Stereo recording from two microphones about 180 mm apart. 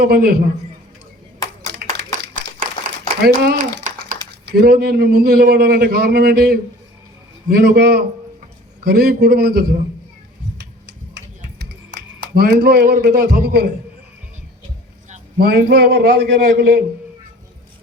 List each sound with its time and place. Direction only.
0.0 s a man's voice: 60° right (ahead or behind)
1.7 s clapping: 65° right (ahead or behind)
3.2 s a sound: 65° right (ahead or behind)
4.4 s a man's voice: 60° right (ahead or behind)
10.6 s a sound: 75° right (ahead or behind)
11.9 s speech: 70° right (ahead or behind)
15.4 s a man's voice: 60° right (ahead or behind)